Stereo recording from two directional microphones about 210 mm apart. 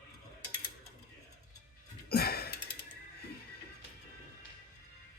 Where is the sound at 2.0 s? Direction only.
45° left (ahead or behind).